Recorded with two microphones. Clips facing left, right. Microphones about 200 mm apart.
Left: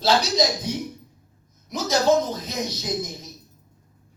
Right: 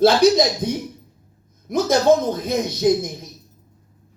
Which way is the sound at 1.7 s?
55° right (ahead or behind).